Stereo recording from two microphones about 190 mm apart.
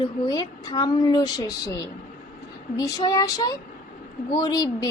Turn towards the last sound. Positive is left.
turn(degrees=20)  # may be behind; listen again after turning